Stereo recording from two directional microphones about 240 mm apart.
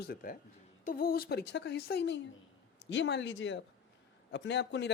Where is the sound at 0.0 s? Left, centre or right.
Left.